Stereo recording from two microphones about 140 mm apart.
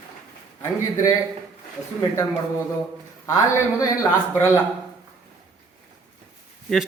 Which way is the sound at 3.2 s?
25° left (ahead or behind).